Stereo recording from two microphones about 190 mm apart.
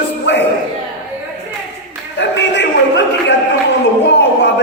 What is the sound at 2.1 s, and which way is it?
Speech, 65° left (ahead or behind).